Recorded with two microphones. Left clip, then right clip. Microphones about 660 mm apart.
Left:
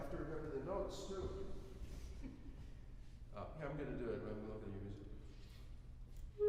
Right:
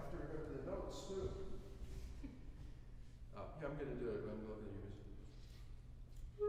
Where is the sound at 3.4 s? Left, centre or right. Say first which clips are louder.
Left 1 dB; left.